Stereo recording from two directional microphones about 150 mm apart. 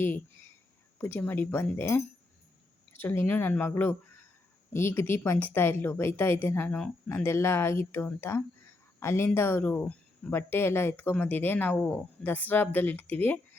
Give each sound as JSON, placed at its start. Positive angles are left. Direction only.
{"t": 0.9, "sound": "a woman's voice", "side_deg": 15}